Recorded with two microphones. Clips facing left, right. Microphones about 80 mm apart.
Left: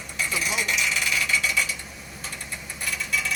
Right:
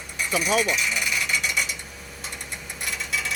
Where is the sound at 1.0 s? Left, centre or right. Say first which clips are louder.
Left 1 dB; centre.